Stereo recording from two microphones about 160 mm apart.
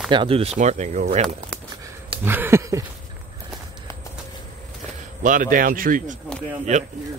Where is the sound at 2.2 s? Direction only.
15° right (ahead or behind).